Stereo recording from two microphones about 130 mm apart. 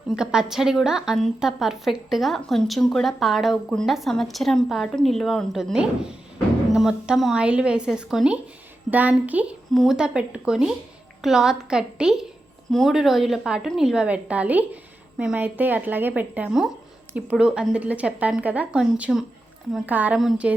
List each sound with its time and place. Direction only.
0.2 s a woman's voice: 5° right (ahead or behind)
20.1 s a woman's voice: centre (ahead or behind)